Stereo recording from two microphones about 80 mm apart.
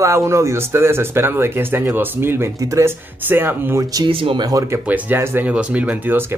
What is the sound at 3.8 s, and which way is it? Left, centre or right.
Speech, right.